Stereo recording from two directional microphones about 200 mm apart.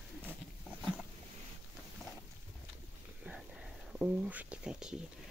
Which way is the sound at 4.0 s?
5° right (ahead or behind).